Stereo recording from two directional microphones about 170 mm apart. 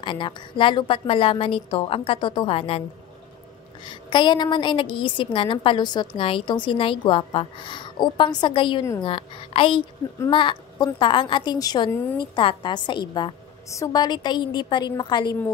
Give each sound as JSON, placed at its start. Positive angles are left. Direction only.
{"t": 0.0, "sound": "a woman's voice", "side_deg": 30}
{"t": 3.8, "sound": "a woman's voice", "side_deg": 25}